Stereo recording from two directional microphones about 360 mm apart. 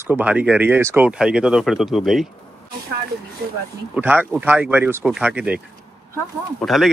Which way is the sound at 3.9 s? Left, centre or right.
Centre.